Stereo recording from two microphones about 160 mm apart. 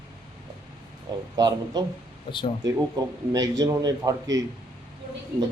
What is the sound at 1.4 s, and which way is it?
A man's voice, 25° right (ahead or behind).